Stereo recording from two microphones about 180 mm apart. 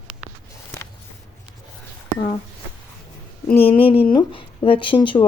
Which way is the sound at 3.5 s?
30° left (ahead or behind).